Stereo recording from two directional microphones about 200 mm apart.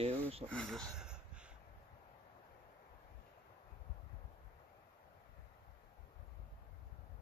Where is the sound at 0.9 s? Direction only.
5° right (ahead or behind).